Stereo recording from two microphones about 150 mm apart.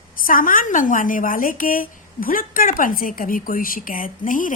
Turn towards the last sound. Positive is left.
turn(degrees=65)  # may be behind; listen again after turning